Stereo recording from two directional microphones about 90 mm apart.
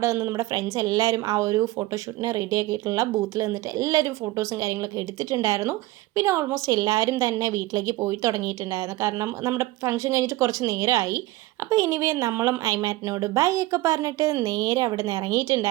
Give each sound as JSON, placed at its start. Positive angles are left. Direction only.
{"t": 0.0, "sound": "a woman's voice", "side_deg": -35}
{"t": 6.7, "sound": "a woman's voice", "side_deg": -45}